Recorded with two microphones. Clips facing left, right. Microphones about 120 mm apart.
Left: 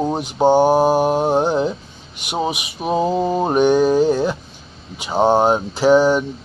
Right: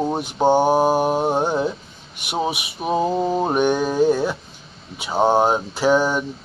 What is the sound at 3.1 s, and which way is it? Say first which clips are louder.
Mantra: left 2 dB; 10° left (ahead or behind).